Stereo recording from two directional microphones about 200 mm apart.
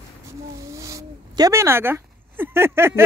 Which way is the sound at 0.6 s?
15° right (ahead or behind).